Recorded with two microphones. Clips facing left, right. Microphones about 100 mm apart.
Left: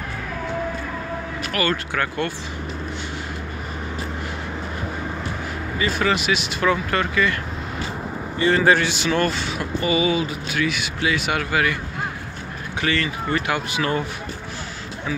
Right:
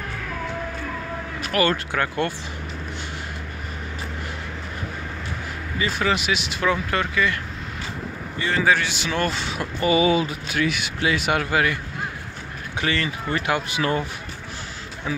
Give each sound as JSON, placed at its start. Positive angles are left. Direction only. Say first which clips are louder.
{"t": 1.5, "sound": "speech", "louder": "right 3 dB", "side_deg": -30}
{"t": 5.8, "sound": "speech", "louder": "left 1 dB", "side_deg": -20}
{"t": 6.6, "sound": "speech", "louder": "left 2 dB", "side_deg": -10}
{"t": 8.4, "sound": "a man's voice", "louder": "left 4 dB", "side_deg": 0}
{"t": 9.3, "sound": "speech", "louder": "left 2 dB", "side_deg": -35}
{"t": 11.3, "sound": "speech", "louder": "even", "side_deg": -30}
{"t": 12.8, "sound": "speech", "louder": "left 2 dB", "side_deg": -25}